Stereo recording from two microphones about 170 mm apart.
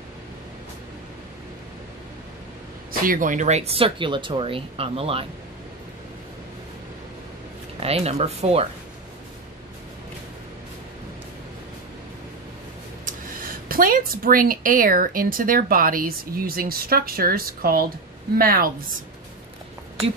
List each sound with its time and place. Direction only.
2.9 s speech: 55° right (ahead or behind); by 5.2 s 35° right (ahead or behind)
7.8 s speech: 35° right (ahead or behind)
13.0 s speech: 55° right (ahead or behind)